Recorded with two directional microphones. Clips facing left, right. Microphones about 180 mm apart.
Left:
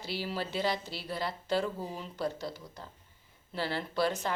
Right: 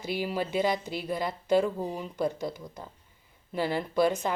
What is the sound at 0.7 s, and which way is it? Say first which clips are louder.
Speech: right 5 dB; 50° right (ahead or behind).